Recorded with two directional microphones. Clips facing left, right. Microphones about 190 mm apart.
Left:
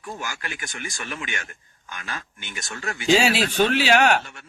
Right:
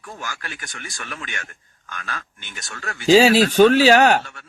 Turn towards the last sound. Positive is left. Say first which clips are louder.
# right 5 dB
turn(degrees=-40)  # may be behind; listen again after turning